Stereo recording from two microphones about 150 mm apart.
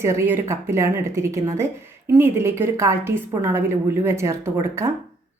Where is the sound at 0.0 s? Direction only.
15° right (ahead or behind).